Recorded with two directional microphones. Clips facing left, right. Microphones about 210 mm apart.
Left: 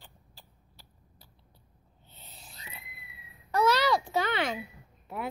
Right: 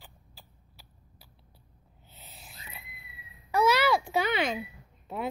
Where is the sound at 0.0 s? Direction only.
5° right (ahead or behind).